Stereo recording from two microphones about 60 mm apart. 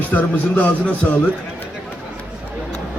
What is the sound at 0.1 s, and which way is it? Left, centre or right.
Speech, left.